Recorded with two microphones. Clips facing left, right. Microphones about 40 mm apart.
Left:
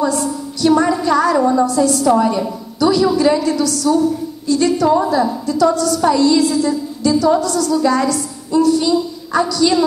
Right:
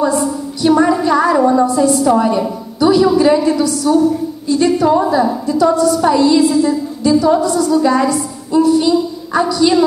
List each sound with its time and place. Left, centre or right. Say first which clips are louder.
0.0 s a woman's voice: right 3 dB; centre